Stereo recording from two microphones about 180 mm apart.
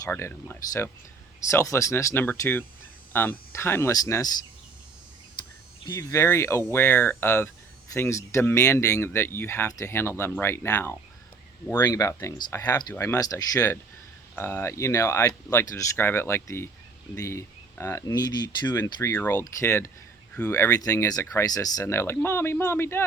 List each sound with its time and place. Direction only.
0.1 s speech: 15° left (ahead or behind)
6.0 s speech: 15° left (ahead or behind)